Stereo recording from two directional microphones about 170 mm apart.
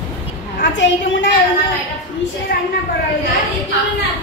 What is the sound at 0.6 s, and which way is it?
Speech, 90° left.